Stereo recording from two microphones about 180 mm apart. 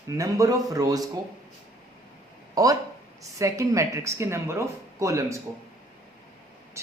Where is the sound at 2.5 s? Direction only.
20° right (ahead or behind).